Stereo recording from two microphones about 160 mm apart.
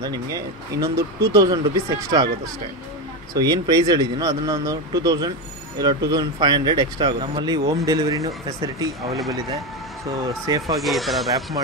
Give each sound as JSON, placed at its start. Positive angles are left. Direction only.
{"t": 0.0, "sound": "speech", "side_deg": -25}
{"t": 3.3, "sound": "speech", "side_deg": -25}
{"t": 10.2, "sound": "speech", "side_deg": -20}
{"t": 10.8, "sound": "speech", "side_deg": 0}